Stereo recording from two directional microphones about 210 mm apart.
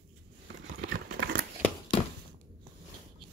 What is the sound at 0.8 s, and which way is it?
Crumpling, 45° right (ahead or behind).